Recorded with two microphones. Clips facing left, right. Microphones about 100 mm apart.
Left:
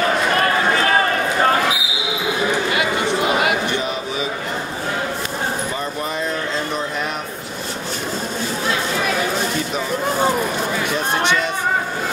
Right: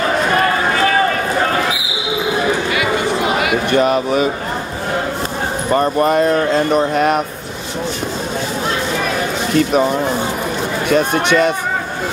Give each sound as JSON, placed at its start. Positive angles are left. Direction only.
{"t": 3.7, "sound": "a sound", "side_deg": -55}
{"t": 5.7, "sound": "speech", "side_deg": -60}
{"t": 9.6, "sound": "speech", "side_deg": -60}
{"t": 10.9, "sound": "speech", "side_deg": -55}